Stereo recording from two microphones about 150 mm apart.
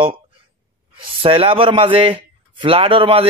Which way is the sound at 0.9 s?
40° right (ahead or behind).